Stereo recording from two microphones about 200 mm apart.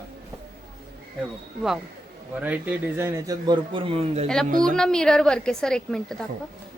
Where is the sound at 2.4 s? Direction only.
10° right (ahead or behind); by 4.3 s 30° right (ahead or behind).